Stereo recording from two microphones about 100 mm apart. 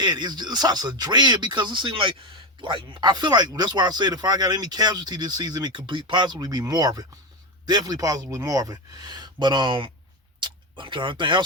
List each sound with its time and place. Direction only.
0.0 s speech: 45° right (ahead or behind)